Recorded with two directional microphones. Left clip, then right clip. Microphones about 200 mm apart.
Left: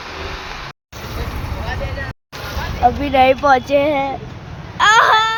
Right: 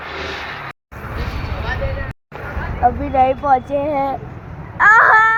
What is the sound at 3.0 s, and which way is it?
Speech, 50° left (ahead or behind).